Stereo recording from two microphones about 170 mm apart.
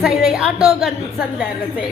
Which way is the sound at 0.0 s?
Centre (ahead or behind).